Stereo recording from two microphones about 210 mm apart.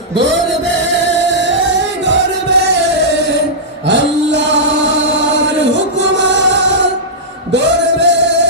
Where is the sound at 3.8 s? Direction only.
60° right (ahead or behind).